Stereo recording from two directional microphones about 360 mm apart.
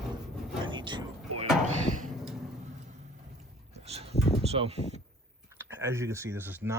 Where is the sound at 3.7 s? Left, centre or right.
Centre.